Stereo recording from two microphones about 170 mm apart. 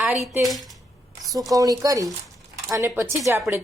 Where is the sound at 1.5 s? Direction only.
20° right (ahead or behind).